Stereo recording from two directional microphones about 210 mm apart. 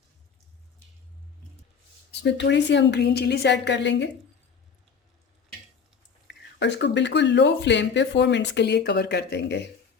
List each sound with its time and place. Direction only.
2.2 s speech: 55° left (ahead or behind)
6.2 s speech: 55° left (ahead or behind)